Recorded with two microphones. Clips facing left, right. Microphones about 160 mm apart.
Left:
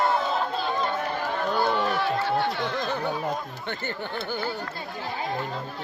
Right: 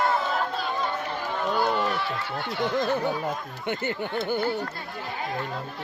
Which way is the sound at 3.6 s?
15° right (ahead or behind).